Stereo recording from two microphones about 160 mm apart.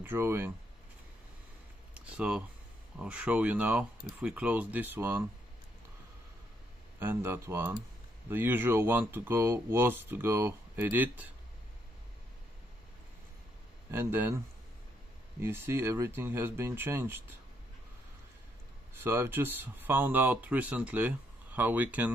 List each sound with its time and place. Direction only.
0.0 s speech: 15° right (ahead or behind)
2.0 s a sound: 10° right (ahead or behind)
3.0 s speech: 5° right (ahead or behind)
7.0 s speech: 15° right (ahead or behind)
13.8 s speech: 15° right (ahead or behind)
15.4 s speech: 15° right (ahead or behind)
18.9 s speech: 15° right (ahead or behind)